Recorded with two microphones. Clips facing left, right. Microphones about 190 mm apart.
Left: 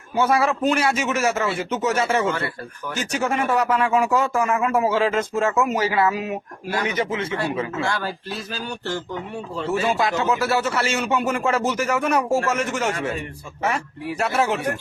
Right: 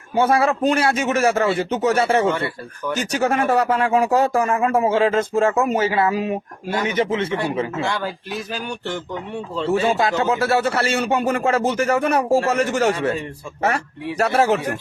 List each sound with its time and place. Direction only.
0.6 s speech: 35° right (ahead or behind)
3.1 s speech: 40° right (ahead or behind); by 8.1 s 20° right (ahead or behind)
8.5 s a sound: 15° right (ahead or behind)
9.7 s speech: 30° right (ahead or behind)